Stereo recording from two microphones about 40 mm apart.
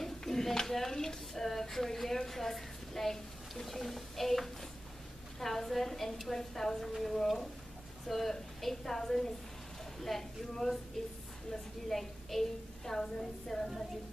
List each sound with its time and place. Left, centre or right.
0.0 s a woman's voice: centre
11.9 s a woman's voice: centre